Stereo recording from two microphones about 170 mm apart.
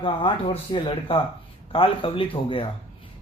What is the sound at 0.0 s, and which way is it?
Speech, 30° left (ahead or behind).